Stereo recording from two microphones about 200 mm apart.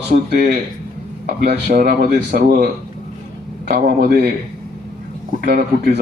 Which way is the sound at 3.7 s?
45° right (ahead or behind).